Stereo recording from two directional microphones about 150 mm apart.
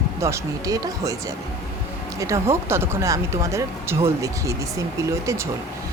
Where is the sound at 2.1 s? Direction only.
20° right (ahead or behind).